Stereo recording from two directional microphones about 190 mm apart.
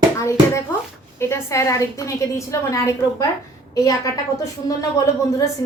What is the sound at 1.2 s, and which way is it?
A woman's voice, 15° left (ahead or behind).